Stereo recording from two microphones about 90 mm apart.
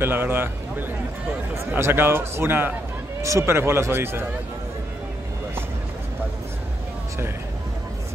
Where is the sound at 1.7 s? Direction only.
25° right (ahead or behind).